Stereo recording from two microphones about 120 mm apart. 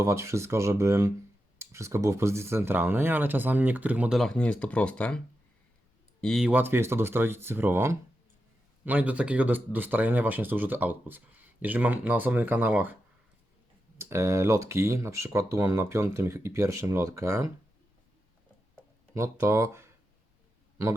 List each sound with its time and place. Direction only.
0.0 s speech: 25° right (ahead or behind)
4.1 s speech: 5° left (ahead or behind)
6.2 s speech: centre (ahead or behind)
6.5 s speech: 15° right (ahead or behind)
14.0 s speech: 20° right (ahead or behind)
19.1 s speech: 25° right (ahead or behind)